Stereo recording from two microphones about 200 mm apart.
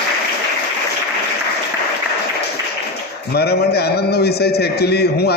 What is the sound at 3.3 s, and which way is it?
A man's voice, 55° left (ahead or behind).